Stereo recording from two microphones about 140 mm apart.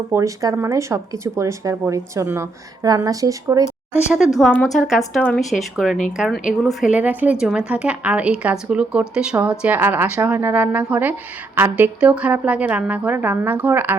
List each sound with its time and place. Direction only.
0.1 s speech: 25° right (ahead or behind)
4.4 s a woman's voice: 5° left (ahead or behind); by 13.9 s 15° right (ahead or behind)